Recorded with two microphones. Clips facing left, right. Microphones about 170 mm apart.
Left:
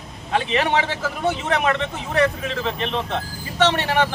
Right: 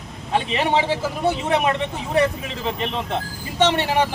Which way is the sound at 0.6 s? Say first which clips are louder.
Right 2 dB; 10° right (ahead or behind).